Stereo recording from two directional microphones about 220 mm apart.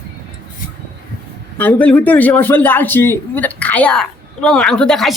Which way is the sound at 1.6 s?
5° left (ahead or behind).